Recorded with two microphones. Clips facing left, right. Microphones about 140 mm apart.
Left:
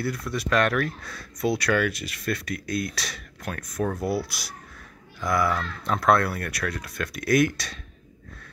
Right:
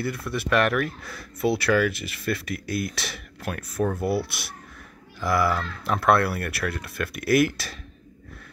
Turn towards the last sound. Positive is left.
turn(degrees=-5)  # may be behind; listen again after turning